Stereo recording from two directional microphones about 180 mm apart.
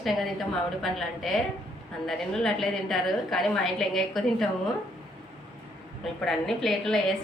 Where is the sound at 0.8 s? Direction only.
Centre (ahead or behind).